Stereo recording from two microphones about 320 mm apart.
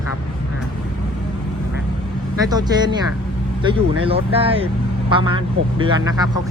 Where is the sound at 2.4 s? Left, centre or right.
Centre.